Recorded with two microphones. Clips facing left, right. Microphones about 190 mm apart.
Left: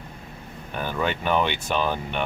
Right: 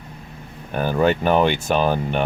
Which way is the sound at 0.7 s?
45° right (ahead or behind).